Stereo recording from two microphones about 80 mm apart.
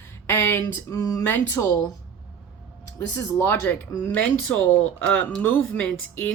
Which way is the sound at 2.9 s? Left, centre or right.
Left.